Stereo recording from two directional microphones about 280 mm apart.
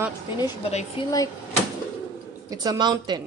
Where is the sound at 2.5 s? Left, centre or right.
Centre.